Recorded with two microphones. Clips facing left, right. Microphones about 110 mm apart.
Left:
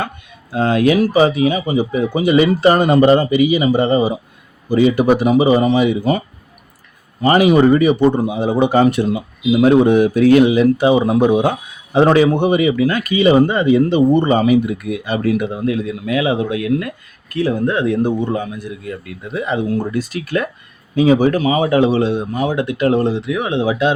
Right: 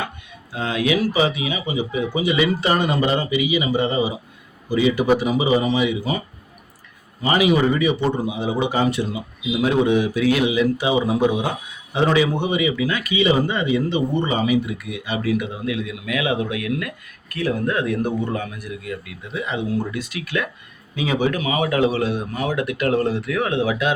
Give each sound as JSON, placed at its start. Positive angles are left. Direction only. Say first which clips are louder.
{"t": 0.5, "sound": "speech", "louder": "left 7 dB", "side_deg": 45}
{"t": 7.2, "sound": "speech", "louder": "left 6 dB", "side_deg": 45}
{"t": 19.0, "sound": "a man's voice", "louder": "left 6 dB", "side_deg": 45}